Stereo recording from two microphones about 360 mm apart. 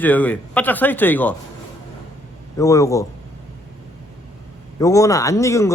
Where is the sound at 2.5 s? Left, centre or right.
Centre.